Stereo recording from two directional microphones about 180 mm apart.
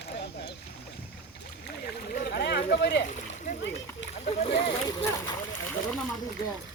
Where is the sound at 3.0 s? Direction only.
40° left (ahead or behind).